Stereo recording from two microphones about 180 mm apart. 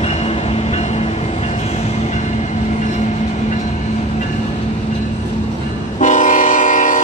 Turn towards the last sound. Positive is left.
turn(degrees=45)  # may be behind; listen again after turning